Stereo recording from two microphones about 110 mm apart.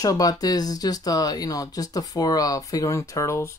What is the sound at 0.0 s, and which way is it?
Speech, 35° left (ahead or behind).